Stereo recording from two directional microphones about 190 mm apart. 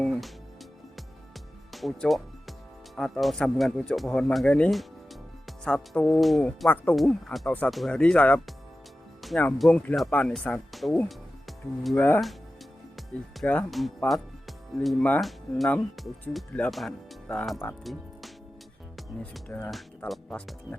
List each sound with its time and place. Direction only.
0.0 s music: centre (ahead or behind)
1.7 s speech: centre (ahead or behind)
18.9 s speech: 5° left (ahead or behind)